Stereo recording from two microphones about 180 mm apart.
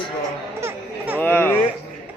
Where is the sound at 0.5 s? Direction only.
15° right (ahead or behind).